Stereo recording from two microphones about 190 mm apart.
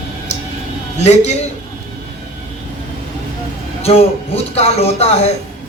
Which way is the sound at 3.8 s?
35° left (ahead or behind).